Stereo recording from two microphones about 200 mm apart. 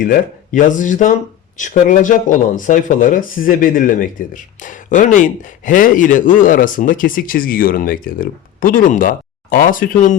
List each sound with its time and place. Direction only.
0.0 s speech: 40° left (ahead or behind)